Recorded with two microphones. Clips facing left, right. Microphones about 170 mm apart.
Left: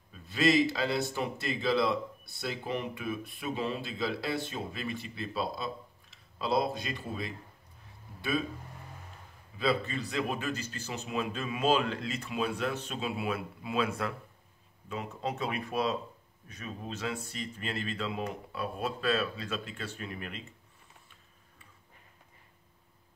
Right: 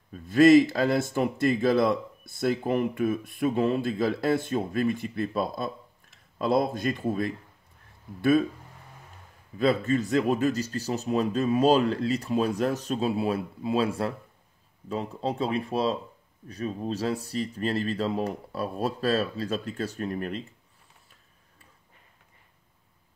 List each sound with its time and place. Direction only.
0.1 s speech: 50° right (ahead or behind)
9.6 s speech: 45° right (ahead or behind)